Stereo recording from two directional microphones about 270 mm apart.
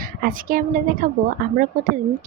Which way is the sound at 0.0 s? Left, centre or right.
Right.